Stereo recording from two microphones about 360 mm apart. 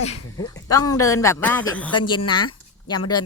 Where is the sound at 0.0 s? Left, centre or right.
Centre.